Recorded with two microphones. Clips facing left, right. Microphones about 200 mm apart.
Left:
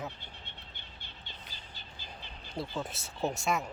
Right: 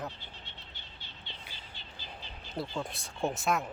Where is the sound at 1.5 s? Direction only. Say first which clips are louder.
Right 1 dB; 40° left (ahead or behind).